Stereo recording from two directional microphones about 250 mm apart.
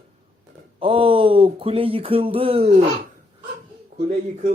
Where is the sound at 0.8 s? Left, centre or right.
Right.